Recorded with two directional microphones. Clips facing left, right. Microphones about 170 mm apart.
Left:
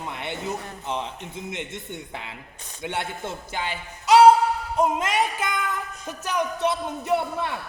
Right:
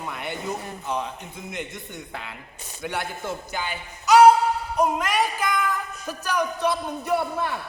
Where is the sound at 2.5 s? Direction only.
5° right (ahead or behind).